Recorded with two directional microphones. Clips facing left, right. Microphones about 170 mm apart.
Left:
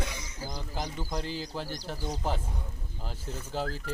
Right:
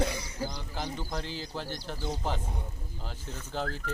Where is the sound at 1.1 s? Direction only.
5° left (ahead or behind).